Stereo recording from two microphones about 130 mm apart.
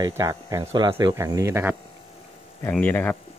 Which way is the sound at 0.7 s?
35° right (ahead or behind).